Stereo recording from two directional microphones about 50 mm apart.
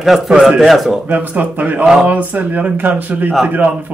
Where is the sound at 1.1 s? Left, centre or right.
Right.